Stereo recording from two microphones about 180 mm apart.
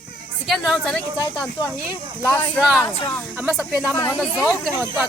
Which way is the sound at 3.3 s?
Centre (ahead or behind).